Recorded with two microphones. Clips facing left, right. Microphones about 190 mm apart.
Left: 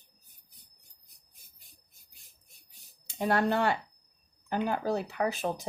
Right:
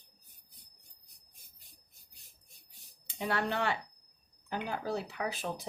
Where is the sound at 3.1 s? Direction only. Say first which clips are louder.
Left 6 dB; 40° left (ahead or behind).